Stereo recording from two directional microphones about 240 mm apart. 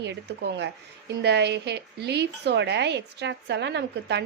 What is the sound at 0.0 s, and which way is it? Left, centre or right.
A woman's voice, right.